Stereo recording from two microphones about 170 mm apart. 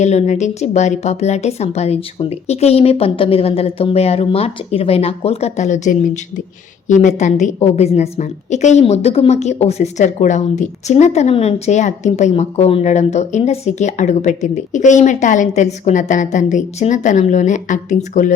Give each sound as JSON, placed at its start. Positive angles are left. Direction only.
{"t": 0.0, "sound": "a woman's voice", "side_deg": 40}